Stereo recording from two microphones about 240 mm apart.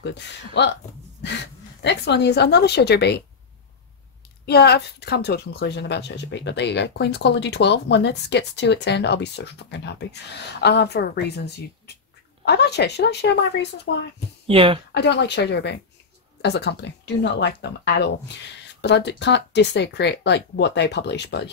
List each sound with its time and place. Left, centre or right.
0.0 s speech: left
4.5 s speech: left
14.5 s speech: right
15.0 s speech: left